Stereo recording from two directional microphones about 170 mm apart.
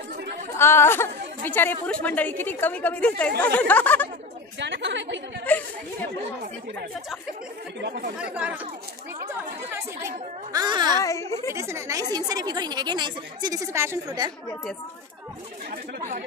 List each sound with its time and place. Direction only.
0.6 s a woman's voice: 15° left (ahead or behind)
4.6 s a woman's voice: 90° right
5.5 s a woman's voice: 10° left (ahead or behind)
8.2 s speech: 5° right (ahead or behind)
9.7 s a woman's voice: 20° right (ahead or behind)
11.0 s a woman's voice: 15° left (ahead or behind)
11.5 s a woman's voice: 15° right (ahead or behind)